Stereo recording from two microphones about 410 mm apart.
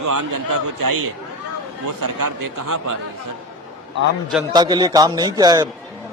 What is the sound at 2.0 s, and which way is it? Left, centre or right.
Speech, right.